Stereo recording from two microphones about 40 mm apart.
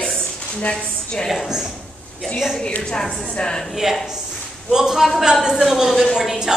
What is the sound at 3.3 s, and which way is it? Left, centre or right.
Speech, centre.